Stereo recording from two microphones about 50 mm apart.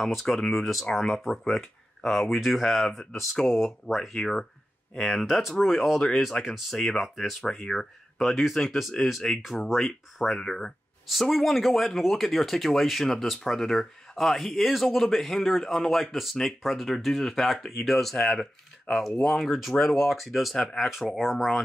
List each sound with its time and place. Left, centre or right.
0.0 s speech: centre
9.3 s speech: centre
9.8 s speech: centre